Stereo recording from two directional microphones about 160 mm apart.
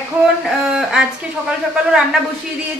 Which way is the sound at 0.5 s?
5° right (ahead or behind).